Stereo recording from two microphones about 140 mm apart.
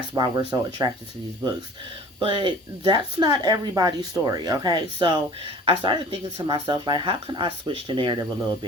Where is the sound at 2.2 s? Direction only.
40° right (ahead or behind).